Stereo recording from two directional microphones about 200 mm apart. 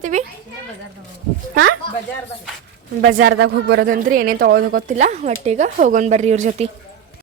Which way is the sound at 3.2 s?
65° right (ahead or behind).